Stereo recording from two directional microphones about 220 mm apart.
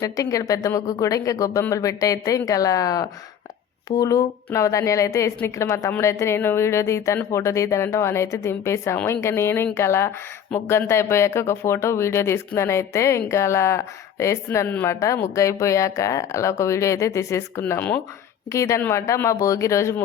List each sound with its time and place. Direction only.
0.0 s speech: 15° left (ahead or behind)